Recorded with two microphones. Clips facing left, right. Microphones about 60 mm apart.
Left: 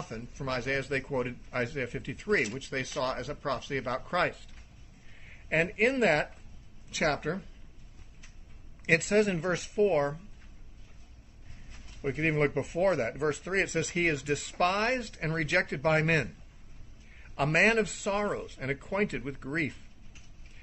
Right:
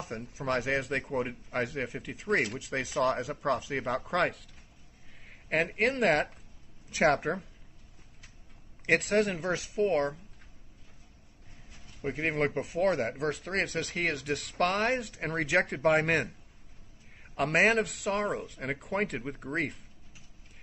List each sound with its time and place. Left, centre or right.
0.1 s speech: right
0.6 s speech: centre
2.6 s speech: centre
5.5 s speech: centre
6.9 s speech: right
8.8 s speech: centre
12.0 s speech: centre
17.4 s speech: centre